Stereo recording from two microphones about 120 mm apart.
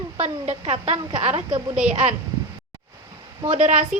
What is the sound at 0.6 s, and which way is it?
A woman's voice, 60° right (ahead or behind).